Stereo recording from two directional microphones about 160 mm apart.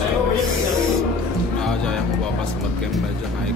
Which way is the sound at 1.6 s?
5° left (ahead or behind).